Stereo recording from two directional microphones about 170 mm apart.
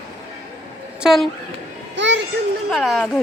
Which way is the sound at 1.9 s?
90° right.